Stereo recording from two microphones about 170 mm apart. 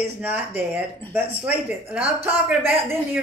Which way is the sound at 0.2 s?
10° right (ahead or behind).